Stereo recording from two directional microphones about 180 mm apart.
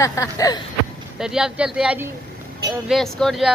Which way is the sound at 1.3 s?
5° right (ahead or behind).